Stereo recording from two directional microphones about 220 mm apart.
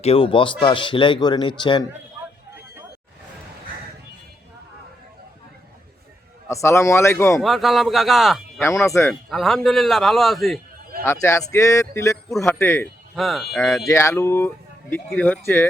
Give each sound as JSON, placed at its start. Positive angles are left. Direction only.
{"t": 0.0, "sound": "speech", "side_deg": 25}
{"t": 6.5, "sound": "speech", "side_deg": 15}
{"t": 7.4, "sound": "a man's voice", "side_deg": 0}
{"t": 8.6, "sound": "a man's voice", "side_deg": 15}
{"t": 11.0, "sound": "speech", "side_deg": 10}
{"t": 13.1, "sound": "a man's voice", "side_deg": 0}
{"t": 13.8, "sound": "speech", "side_deg": 10}